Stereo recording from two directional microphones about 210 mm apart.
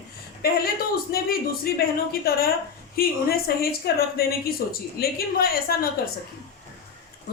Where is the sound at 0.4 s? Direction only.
45° left (ahead or behind).